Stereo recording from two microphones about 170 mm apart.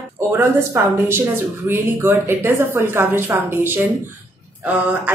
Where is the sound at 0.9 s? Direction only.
15° right (ahead or behind).